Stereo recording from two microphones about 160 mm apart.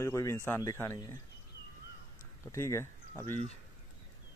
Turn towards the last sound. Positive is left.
turn(degrees=15)  # may be behind; listen again after turning